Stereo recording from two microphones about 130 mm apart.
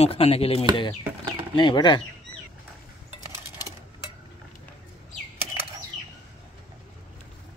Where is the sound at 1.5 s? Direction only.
35° left (ahead or behind).